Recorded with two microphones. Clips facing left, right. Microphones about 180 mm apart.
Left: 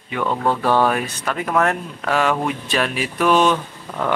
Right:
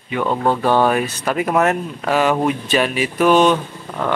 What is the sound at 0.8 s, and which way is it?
Speech, 10° right (ahead or behind).